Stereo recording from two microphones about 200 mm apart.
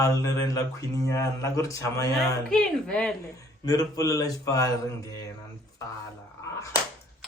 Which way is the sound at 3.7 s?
20° left (ahead or behind).